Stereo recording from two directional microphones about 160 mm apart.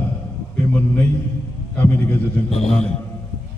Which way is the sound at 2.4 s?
40° left (ahead or behind).